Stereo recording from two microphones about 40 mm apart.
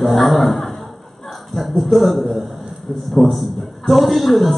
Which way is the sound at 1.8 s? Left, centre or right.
Centre.